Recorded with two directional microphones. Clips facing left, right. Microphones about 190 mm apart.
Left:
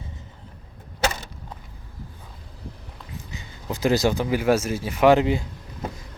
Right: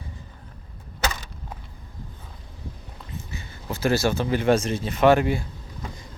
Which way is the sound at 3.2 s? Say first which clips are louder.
Right 2 dB; 15° left (ahead or behind).